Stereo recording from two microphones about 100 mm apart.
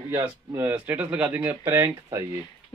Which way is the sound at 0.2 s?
20° right (ahead or behind).